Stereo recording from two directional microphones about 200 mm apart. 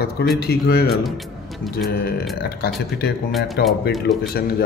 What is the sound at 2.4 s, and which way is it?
A man's voice, 50° left (ahead or behind).